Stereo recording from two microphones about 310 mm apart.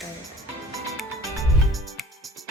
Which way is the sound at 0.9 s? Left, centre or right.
Centre.